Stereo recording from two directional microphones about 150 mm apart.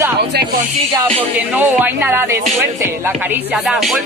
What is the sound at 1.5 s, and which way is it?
Speech, 10° right (ahead or behind).